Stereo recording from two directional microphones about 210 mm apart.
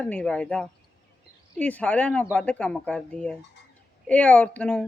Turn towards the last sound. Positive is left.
turn(degrees=5)  # may be behind; listen again after turning